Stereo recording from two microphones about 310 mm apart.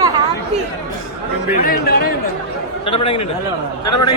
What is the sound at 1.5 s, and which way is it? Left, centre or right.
A man's voice, left.